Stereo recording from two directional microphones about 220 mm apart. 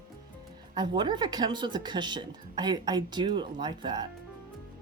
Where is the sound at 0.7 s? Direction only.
20° right (ahead or behind).